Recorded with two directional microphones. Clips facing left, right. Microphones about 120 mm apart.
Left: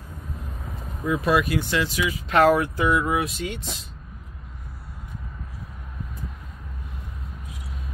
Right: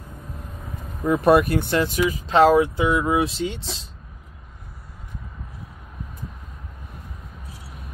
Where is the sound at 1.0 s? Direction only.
50° right (ahead or behind).